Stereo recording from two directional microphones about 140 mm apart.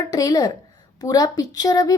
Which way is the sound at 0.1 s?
25° left (ahead or behind).